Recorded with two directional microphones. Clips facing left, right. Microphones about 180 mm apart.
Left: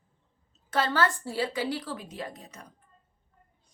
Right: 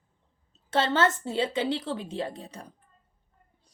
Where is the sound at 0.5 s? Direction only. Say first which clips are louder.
Right 2 dB; 25° right (ahead or behind).